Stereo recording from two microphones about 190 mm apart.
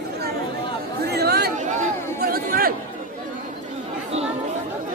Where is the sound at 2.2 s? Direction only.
50° right (ahead or behind).